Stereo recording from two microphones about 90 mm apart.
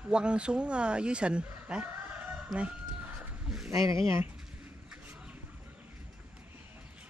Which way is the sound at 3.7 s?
35° right (ahead or behind).